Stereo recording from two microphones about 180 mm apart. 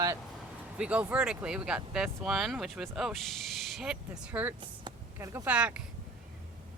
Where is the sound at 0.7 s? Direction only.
5° right (ahead or behind).